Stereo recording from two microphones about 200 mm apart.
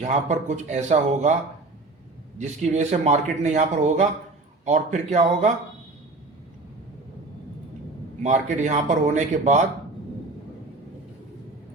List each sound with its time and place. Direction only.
0.0 s a man's voice: 35° right (ahead or behind)
2.6 s a man's voice: 35° right (ahead or behind)
8.2 s a man's voice: 35° right (ahead or behind)